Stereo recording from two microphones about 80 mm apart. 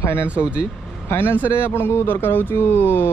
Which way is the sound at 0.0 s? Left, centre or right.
Left.